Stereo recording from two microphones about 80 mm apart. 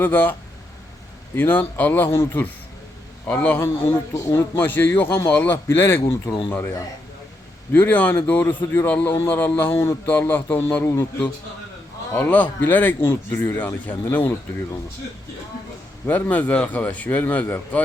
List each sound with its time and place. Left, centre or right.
0.0 s a man's voice: left
1.4 s a man's voice: left
7.7 s a man's voice: left
10.1 s a man's voice: left
12.1 s a man's voice: left
16.0 s a man's voice: left